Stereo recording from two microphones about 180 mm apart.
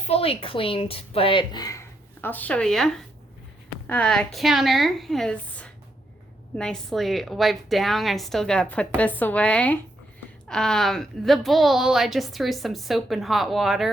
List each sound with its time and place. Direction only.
0.0 s a woman's voice: 35° left (ahead or behind); by 13.9 s centre (ahead or behind)